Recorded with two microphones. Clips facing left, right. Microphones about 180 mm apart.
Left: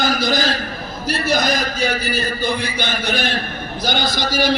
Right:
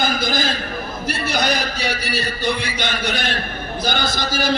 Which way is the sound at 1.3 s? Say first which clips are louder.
Left 3 dB; 65° right (ahead or behind).